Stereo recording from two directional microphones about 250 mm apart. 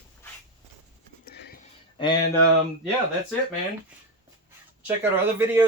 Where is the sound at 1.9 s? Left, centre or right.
Centre.